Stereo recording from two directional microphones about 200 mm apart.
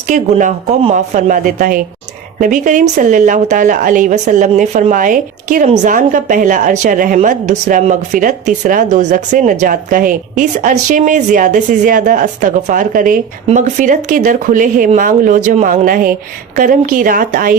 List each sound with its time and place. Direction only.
0.1 s a woman's voice: 40° right (ahead or behind)